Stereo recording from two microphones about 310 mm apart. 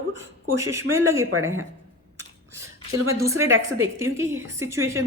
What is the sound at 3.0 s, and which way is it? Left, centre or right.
A woman's voice, centre.